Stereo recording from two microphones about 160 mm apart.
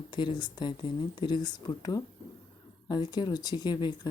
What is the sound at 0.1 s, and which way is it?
Speech, 30° left (ahead or behind).